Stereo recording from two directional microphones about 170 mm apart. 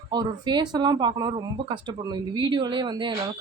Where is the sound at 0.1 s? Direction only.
25° right (ahead or behind).